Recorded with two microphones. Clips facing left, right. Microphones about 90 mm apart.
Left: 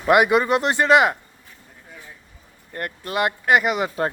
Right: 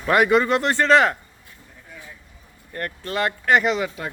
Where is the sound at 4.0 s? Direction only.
40° left (ahead or behind).